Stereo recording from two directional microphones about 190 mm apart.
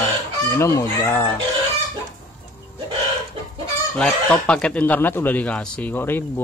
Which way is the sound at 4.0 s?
5° left (ahead or behind).